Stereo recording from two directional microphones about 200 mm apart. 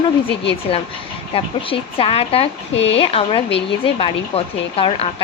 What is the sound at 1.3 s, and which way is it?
Speech, 30° left (ahead or behind).